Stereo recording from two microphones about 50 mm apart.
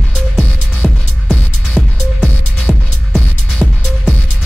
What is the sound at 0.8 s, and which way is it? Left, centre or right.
Music, centre.